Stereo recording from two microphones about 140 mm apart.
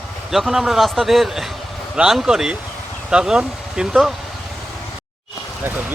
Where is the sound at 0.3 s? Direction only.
Centre (ahead or behind).